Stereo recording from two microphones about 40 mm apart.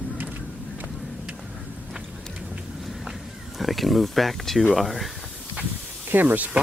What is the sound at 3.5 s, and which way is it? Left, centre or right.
Speech, centre.